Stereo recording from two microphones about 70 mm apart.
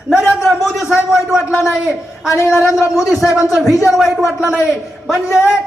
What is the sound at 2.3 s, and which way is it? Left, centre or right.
Speech, left.